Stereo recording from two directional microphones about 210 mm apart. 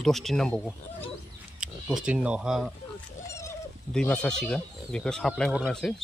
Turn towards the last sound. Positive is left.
turn(degrees=0)  # may be behind; listen again after turning